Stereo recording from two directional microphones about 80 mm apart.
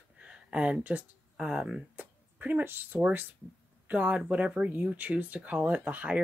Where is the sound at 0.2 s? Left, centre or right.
Centre.